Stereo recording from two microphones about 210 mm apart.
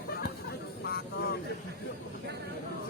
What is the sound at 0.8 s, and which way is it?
Vehicle, 45° left (ahead or behind).